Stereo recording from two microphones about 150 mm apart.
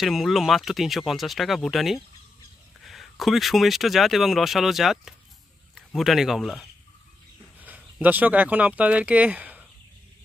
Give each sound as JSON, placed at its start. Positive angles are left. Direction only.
{"t": 0.0, "sound": "speech", "side_deg": 0}
{"t": 7.6, "sound": "speech", "side_deg": -10}